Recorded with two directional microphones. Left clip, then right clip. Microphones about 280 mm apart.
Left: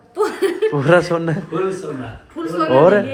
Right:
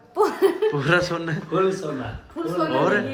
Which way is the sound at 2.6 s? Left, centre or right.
Centre.